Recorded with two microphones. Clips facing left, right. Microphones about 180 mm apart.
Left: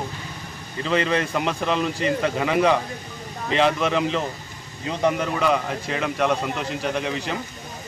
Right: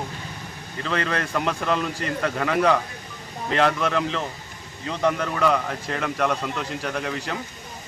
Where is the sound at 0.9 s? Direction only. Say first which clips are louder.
Left 4 dB; 5° left (ahead or behind).